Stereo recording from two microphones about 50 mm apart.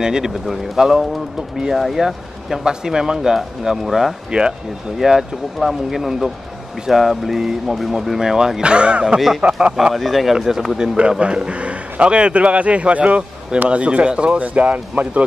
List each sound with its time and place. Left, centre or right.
0.0 s speech: centre
4.3 s speech: centre
4.9 s a man's voice: centre; by 9.8 s right
9.9 s speech: centre
11.0 s a man's voice: right